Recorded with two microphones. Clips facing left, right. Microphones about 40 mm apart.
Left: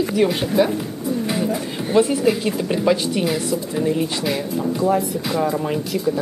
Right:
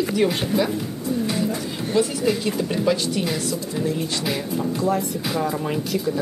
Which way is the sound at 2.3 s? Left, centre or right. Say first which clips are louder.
Left 3 dB; centre.